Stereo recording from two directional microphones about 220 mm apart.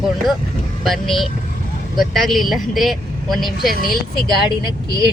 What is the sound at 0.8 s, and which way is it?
Speech, centre (ahead or behind).